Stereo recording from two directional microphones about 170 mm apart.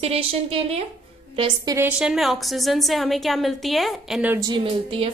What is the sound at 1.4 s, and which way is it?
Speech, 20° right (ahead or behind).